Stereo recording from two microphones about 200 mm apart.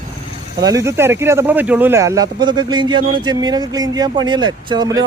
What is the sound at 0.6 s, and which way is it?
Speech, 15° right (ahead or behind).